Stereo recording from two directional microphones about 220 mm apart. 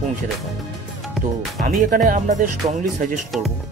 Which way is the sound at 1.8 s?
40° right (ahead or behind).